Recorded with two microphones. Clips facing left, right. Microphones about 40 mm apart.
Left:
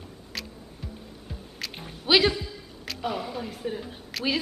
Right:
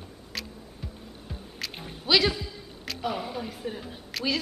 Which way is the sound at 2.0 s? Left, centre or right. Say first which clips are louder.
Left 2 dB; centre.